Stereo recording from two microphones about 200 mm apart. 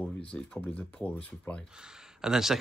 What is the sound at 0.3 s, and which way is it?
Speech, 5° left (ahead or behind).